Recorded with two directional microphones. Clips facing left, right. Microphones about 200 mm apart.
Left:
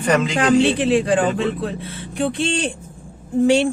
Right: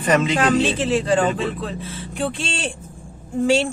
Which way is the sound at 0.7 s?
15° left (ahead or behind).